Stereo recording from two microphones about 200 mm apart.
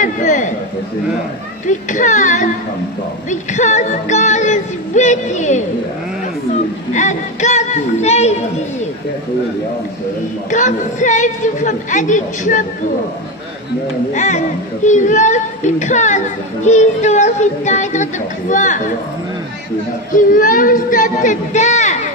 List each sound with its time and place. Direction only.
0.0 s a sound: 40° left (ahead or behind)
1.7 s music: 40° left (ahead or behind)
6.9 s music: 35° left (ahead or behind)
10.5 s music: 40° left (ahead or behind)
14.1 s music: 35° left (ahead or behind)
20.1 s music: 40° left (ahead or behind)